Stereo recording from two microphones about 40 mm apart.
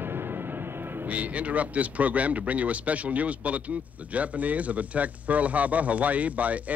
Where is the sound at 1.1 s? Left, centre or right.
Right.